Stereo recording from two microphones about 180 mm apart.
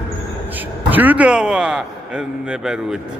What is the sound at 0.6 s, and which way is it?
A man's voice, 10° right (ahead or behind).